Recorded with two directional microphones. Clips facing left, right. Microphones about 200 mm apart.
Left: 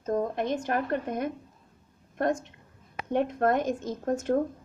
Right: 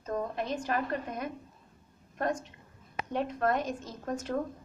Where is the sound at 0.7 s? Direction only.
55° left (ahead or behind).